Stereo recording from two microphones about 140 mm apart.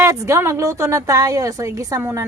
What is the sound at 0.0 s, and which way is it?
A woman's voice, 20° right (ahead or behind).